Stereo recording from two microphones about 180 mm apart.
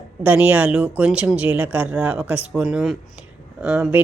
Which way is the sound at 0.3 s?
10° right (ahead or behind).